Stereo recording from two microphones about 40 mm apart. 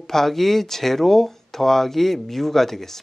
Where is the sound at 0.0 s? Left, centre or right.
Centre.